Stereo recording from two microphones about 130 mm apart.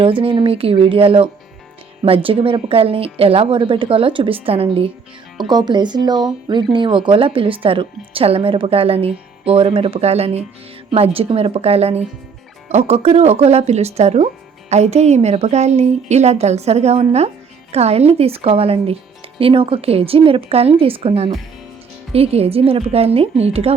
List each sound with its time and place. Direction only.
0.0 s a woman's voice: 45° right (ahead or behind)
5.5 s a woman's voice: 35° right (ahead or behind); by 23.7 s 50° right (ahead or behind)